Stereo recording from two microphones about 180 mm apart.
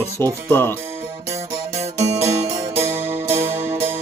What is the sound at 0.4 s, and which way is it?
Speech, 10° left (ahead or behind).